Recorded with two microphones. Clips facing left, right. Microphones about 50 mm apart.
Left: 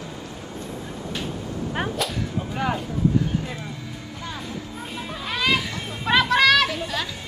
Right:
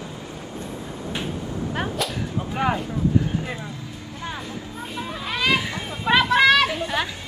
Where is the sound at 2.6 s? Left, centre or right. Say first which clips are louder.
Right 3 dB; centre.